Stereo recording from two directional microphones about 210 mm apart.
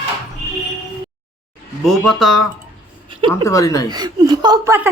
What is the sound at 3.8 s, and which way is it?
Speech, 20° right (ahead or behind).